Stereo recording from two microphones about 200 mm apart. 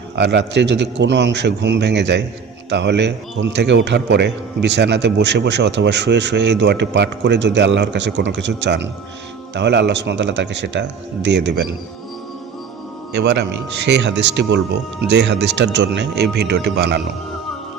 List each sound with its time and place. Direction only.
0.2 s a man's voice: 60° right (ahead or behind)
13.1 s a man's voice: 55° right (ahead or behind)